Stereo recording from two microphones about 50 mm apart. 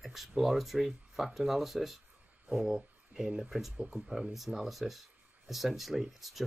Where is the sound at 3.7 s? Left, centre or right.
Right.